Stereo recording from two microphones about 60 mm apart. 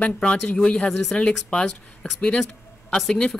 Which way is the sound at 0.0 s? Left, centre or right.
Centre.